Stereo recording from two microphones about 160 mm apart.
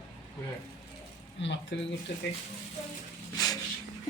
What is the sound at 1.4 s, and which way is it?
Speech, 90° left.